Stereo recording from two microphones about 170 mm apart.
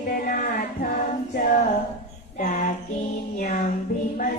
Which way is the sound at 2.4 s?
50° left (ahead or behind).